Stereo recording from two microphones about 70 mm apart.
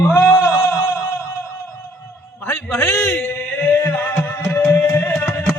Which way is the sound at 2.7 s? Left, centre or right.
Left.